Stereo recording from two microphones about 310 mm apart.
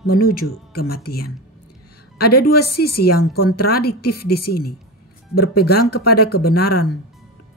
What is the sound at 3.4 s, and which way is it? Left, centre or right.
Speech, left.